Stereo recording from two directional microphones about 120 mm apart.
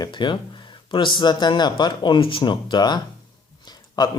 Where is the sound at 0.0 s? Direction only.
40° left (ahead or behind).